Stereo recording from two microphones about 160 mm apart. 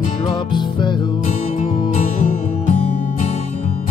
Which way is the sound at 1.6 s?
30° left (ahead or behind).